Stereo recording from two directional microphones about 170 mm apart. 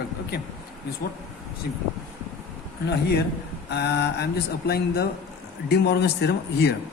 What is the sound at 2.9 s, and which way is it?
Speech, 75° left (ahead or behind).